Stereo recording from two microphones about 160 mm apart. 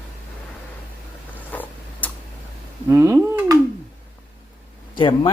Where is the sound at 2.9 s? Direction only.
15° right (ahead or behind).